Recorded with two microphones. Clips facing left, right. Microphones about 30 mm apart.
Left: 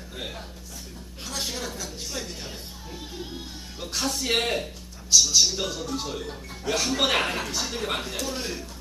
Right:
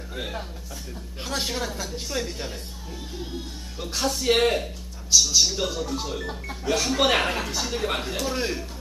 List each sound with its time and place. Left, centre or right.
0.1 s a man's voice: centre
1.2 s a woman's voice: right
1.5 s speech: centre
2.5 s speech: centre